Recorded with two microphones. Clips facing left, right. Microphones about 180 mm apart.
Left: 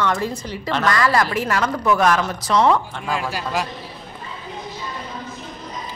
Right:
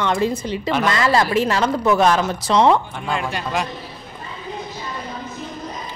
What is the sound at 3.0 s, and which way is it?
Speech, 5° left (ahead or behind).